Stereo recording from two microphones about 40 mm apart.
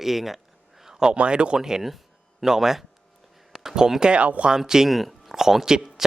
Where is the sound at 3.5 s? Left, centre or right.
Centre.